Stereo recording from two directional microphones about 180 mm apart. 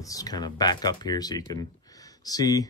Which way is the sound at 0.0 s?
20° left (ahead or behind).